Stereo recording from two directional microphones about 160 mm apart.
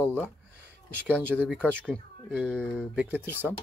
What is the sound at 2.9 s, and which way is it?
Speech, 10° right (ahead or behind).